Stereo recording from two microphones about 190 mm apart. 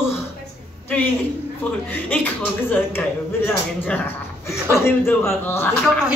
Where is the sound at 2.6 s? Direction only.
10° left (ahead or behind).